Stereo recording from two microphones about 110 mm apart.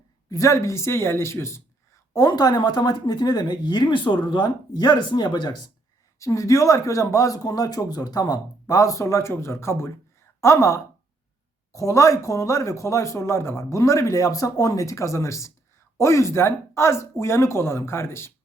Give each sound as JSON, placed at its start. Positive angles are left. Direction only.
{"t": 0.3, "sound": "speech", "side_deg": 30}
{"t": 2.1, "sound": "speech", "side_deg": 35}
{"t": 6.1, "sound": "speech", "side_deg": 30}